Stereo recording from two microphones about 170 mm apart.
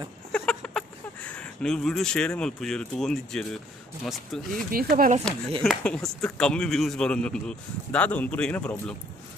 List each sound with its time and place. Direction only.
0.3 s a sound: 5° left (ahead or behind)
4.0 s speech: centre (ahead or behind)
4.6 s speech: 60° right (ahead or behind)
5.6 s speech: 5° left (ahead or behind)